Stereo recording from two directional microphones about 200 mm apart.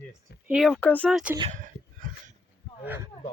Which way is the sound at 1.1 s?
5° right (ahead or behind).